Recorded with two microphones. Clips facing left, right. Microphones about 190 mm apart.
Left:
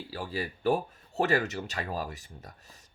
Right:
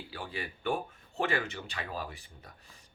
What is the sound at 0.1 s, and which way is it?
Speech, 35° left (ahead or behind).